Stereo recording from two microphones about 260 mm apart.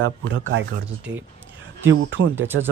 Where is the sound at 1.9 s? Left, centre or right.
Right.